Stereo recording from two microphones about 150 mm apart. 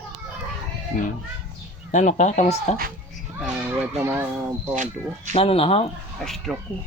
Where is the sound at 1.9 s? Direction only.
55° left (ahead or behind).